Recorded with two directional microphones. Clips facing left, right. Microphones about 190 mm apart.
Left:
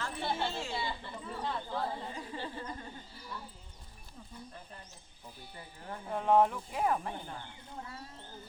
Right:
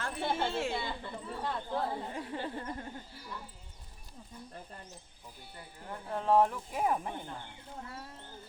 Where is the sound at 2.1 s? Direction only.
60° right (ahead or behind).